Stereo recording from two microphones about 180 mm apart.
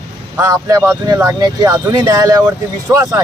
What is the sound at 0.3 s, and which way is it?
Speech, 15° right (ahead or behind).